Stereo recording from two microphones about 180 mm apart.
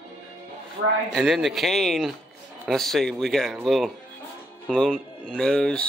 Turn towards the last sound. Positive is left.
turn(degrees=5)  # may be behind; listen again after turning